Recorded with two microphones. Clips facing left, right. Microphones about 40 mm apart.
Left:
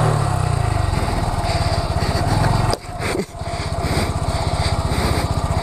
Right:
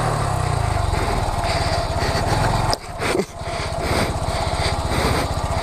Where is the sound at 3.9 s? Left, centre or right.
Centre.